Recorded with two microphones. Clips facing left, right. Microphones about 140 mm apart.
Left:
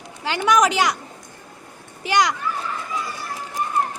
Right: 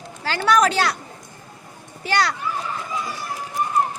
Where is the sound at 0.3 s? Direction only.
15° left (ahead or behind).